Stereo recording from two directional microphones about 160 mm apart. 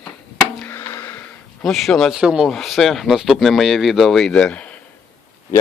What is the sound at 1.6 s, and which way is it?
Speech, centre (ahead or behind).